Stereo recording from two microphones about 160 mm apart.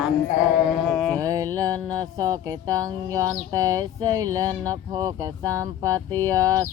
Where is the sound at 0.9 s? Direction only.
Centre (ahead or behind).